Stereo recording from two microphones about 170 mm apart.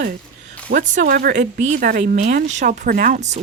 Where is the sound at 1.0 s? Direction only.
65° right (ahead or behind).